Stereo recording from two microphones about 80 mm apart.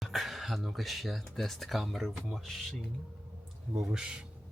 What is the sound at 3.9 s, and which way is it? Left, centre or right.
Speech, centre.